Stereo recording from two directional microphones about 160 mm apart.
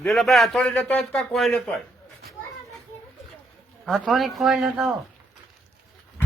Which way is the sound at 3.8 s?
Centre (ahead or behind).